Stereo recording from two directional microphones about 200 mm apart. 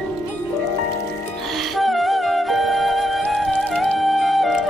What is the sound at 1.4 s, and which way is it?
Music, centre (ahead or behind).